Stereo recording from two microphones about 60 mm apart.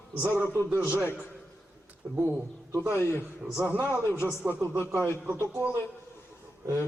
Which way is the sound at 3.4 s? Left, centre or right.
Centre.